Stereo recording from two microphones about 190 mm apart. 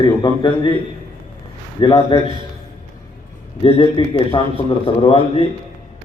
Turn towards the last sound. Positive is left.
turn(degrees=30)  # may be behind; listen again after turning